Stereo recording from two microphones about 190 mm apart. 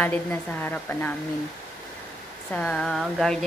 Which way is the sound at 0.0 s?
10° left (ahead or behind).